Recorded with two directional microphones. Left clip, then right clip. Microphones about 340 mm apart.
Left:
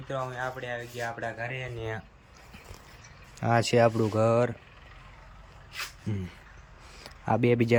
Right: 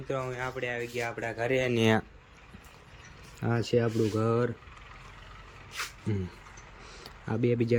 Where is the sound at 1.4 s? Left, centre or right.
Centre.